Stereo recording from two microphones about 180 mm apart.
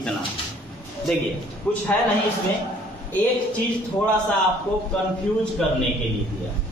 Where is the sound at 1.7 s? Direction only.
5° left (ahead or behind).